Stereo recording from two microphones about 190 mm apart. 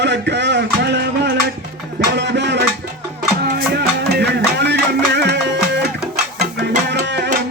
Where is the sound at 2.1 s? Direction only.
65° right (ahead or behind).